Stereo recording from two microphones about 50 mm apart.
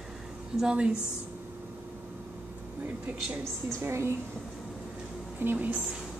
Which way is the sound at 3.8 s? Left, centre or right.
Right.